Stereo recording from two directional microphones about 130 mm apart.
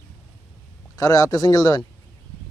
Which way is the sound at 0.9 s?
25° left (ahead or behind).